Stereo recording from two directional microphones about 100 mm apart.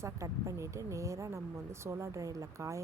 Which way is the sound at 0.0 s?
30° right (ahead or behind).